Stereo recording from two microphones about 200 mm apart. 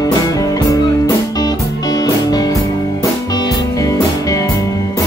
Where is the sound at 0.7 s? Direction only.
15° left (ahead or behind).